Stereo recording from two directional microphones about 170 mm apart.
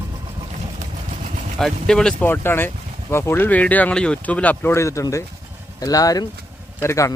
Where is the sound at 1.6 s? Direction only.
5° left (ahead or behind).